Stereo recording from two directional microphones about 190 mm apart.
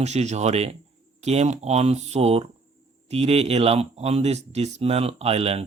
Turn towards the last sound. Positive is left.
turn(degrees=-30)  # may be behind; listen again after turning